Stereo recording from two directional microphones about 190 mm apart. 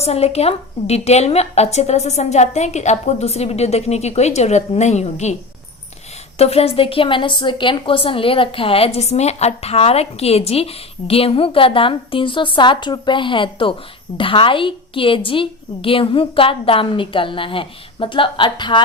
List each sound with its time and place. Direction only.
0.0 s a woman's voice: 35° left (ahead or behind)
6.4 s a woman's voice: 30° left (ahead or behind)